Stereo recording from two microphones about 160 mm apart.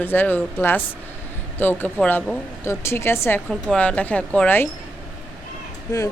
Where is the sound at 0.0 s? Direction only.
10° left (ahead or behind).